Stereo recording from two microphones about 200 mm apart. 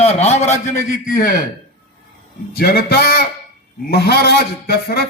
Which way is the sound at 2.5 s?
50° left (ahead or behind).